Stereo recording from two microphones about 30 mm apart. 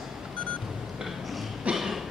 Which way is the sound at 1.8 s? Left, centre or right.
Centre.